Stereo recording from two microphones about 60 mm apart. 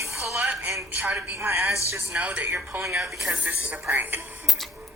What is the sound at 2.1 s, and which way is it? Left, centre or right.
Speech, right.